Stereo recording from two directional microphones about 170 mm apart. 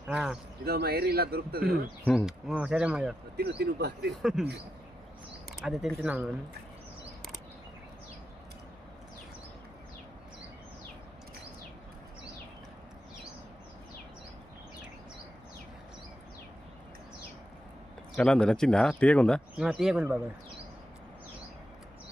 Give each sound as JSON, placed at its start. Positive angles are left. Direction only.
{"t": 0.1, "sound": "speech", "side_deg": -5}
{"t": 0.6, "sound": "speech", "side_deg": -70}
{"t": 2.0, "sound": "speech", "side_deg": 5}
{"t": 2.5, "sound": "speech", "side_deg": -5}
{"t": 3.3, "sound": "speech", "side_deg": -70}
{"t": 4.2, "sound": "speech", "side_deg": -5}
{"t": 5.6, "sound": "speech", "side_deg": 0}
{"t": 18.2, "sound": "speech", "side_deg": 5}